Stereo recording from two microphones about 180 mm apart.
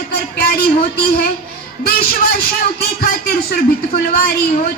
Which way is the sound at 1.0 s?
60° left (ahead or behind).